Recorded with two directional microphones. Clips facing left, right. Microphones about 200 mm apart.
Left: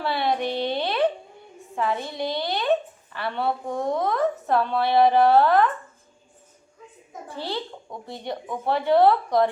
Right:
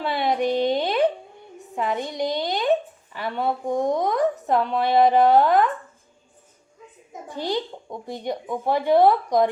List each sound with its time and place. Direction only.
0.0 s a sound: 15° right (ahead or behind)
1.7 s a woman's voice: 20° right (ahead or behind)
7.1 s a woman's voice: 15° right (ahead or behind)